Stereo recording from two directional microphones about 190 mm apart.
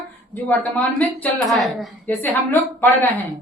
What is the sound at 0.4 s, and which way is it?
A woman's voice, 10° left (ahead or behind).